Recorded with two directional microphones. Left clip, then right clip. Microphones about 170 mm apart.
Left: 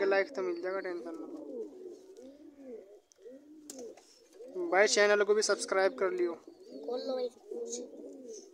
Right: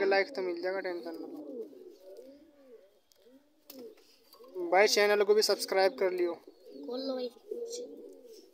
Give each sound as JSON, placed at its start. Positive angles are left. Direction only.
{"t": 0.0, "sound": "speech", "side_deg": 0}
{"t": 4.6, "sound": "speech", "side_deg": 0}
{"t": 6.9, "sound": "bird", "side_deg": 40}